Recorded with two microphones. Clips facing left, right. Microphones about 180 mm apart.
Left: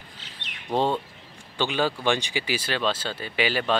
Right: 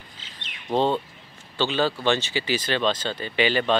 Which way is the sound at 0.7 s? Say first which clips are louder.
Right 2 dB; 10° left (ahead or behind).